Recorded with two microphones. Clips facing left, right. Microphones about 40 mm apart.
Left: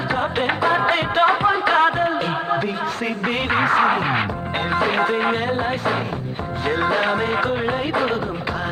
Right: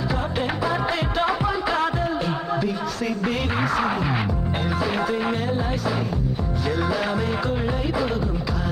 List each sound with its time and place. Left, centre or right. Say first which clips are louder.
0.1 s music: left 7 dB; left